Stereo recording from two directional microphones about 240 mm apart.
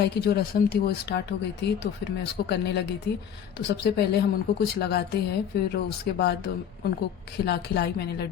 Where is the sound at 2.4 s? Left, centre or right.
Left.